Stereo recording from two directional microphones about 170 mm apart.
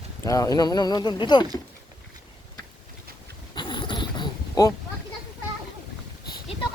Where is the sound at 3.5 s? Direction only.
25° left (ahead or behind).